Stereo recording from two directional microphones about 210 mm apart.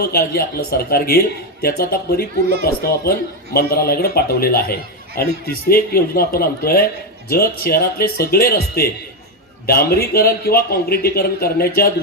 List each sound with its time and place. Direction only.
0.0 s a man's voice: 45° left (ahead or behind)